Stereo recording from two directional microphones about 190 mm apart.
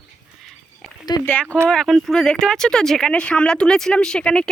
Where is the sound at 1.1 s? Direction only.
20° left (ahead or behind).